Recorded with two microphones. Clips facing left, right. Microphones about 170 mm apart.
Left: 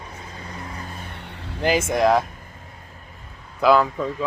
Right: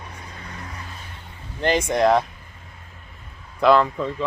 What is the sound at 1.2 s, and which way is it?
Vehicle, 75° left (ahead or behind).